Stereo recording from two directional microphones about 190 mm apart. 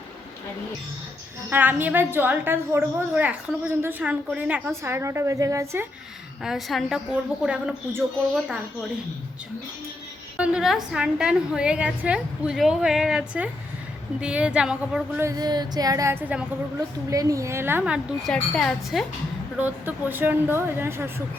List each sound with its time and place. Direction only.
1.5 s a woman's voice: 10° right (ahead or behind)
6.4 s a woman's voice: centre (ahead or behind)
10.3 s a woman's voice: 5° right (ahead or behind)
15.3 s a woman's voice: 20° right (ahead or behind)